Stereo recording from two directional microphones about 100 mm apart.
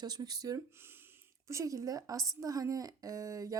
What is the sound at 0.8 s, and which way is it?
Speech, 25° right (ahead or behind).